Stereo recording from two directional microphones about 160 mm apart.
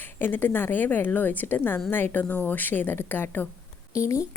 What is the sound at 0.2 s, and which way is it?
A woman's voice, 10° left (ahead or behind).